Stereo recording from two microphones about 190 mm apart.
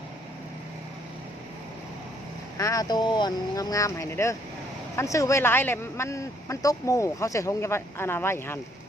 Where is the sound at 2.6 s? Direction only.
20° left (ahead or behind).